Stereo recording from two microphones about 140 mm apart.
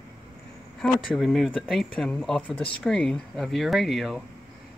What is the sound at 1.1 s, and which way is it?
Speech, centre (ahead or behind).